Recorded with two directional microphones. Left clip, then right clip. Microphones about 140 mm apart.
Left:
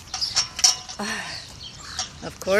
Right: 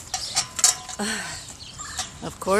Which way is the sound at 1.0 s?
25° right (ahead or behind).